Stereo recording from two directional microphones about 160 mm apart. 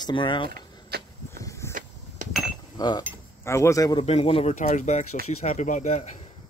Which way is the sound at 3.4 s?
15° left (ahead or behind).